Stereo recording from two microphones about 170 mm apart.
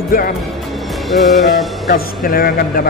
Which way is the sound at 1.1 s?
Centre (ahead or behind).